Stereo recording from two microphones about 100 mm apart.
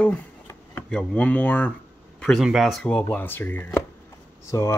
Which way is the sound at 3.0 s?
20° left (ahead or behind).